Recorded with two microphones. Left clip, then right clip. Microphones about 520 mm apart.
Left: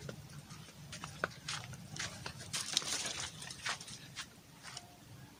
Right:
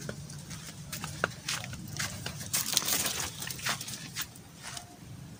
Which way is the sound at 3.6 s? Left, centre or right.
Left.